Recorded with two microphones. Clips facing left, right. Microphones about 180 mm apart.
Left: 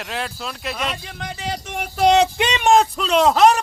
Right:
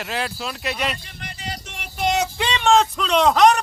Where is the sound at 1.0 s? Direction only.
90° left.